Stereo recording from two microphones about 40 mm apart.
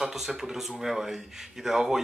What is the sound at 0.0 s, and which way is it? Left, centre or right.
Speech, centre.